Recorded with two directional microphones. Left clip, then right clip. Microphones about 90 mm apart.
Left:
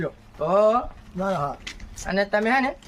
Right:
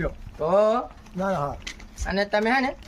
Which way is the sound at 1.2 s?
20° right (ahead or behind).